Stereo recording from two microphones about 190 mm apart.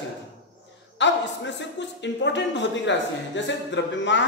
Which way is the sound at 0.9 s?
70° left (ahead or behind).